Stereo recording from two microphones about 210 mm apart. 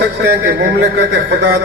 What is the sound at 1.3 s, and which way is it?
Speech, 55° right (ahead or behind).